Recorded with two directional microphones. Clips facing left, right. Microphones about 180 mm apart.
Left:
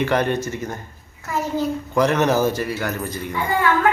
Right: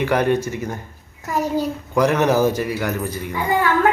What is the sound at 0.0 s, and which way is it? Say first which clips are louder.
Speech: right 2 dB; 10° right (ahead or behind).